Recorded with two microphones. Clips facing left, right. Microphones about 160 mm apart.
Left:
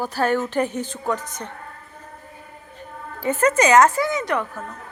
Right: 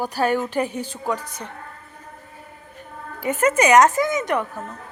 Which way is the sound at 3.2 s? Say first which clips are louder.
Even; 15° right (ahead or behind).